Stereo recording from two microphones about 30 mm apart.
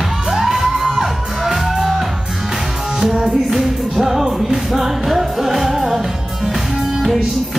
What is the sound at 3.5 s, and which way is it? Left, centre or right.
Music, centre.